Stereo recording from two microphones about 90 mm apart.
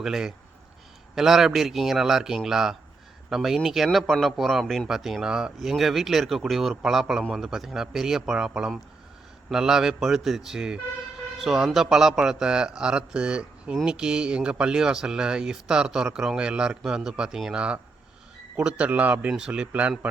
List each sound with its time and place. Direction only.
0.0 s speech: 5° right (ahead or behind)
4.6 s speech: 10° left (ahead or behind)
4.9 s speech: 5° right (ahead or behind)